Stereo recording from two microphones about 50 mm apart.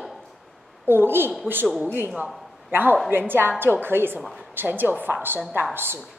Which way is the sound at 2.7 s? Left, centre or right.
Right.